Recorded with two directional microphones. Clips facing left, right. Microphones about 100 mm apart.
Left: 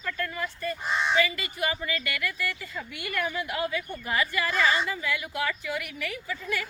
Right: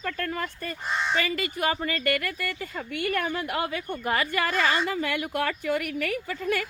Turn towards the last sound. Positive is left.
turn(degrees=-55)  # may be behind; listen again after turning